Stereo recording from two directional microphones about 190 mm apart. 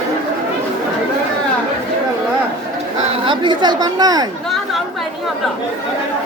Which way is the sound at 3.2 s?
25° right (ahead or behind).